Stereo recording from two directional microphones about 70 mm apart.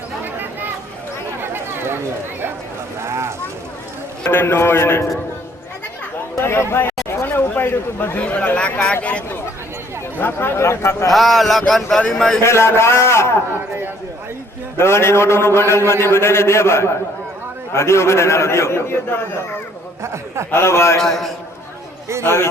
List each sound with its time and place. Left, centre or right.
1.4 s a sound: right
3.0 s speech: right
4.3 s a man's voice: left
6.3 s a man's voice: left
8.2 s speech: centre
10.2 s a man's voice: left
11.1 s a man's voice: centre
12.4 s a man's voice: left
14.8 s a man's voice: left
20.0 s speech: right
20.5 s a man's voice: left
21.0 s a man's voice: centre
22.2 s a man's voice: left